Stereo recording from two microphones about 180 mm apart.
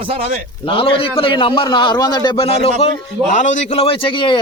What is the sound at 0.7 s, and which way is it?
A man's voice, 30° left (ahead or behind).